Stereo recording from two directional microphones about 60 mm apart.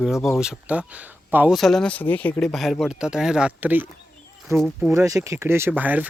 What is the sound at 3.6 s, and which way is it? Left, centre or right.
Speech, right.